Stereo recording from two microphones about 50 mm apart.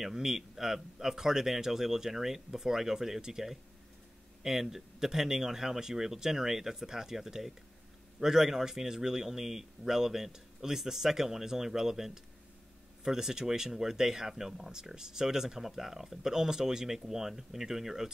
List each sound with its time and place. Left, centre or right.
0.0 s speech: centre